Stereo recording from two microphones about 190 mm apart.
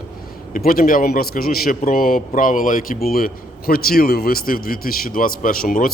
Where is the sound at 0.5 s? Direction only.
50° left (ahead or behind).